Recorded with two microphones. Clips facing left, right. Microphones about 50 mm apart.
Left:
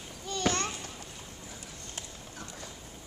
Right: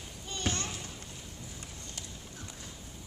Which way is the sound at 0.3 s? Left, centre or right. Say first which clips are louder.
Left 5 dB; left.